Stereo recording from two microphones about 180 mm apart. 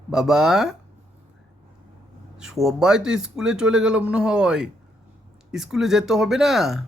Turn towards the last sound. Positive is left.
turn(degrees=0)  # may be behind; listen again after turning